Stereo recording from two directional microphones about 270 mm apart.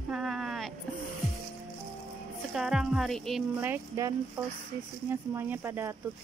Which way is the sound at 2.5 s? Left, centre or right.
Centre.